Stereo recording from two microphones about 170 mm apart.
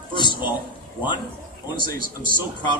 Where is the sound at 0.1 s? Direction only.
25° left (ahead or behind).